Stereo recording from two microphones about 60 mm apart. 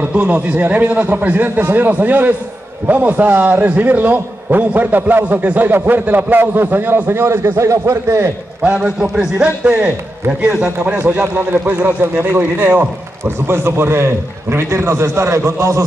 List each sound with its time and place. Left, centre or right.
0.1 s a man's voice: right
8.6 s a man's voice: right
11.6 s a man's voice: right
13.5 s a man's voice: right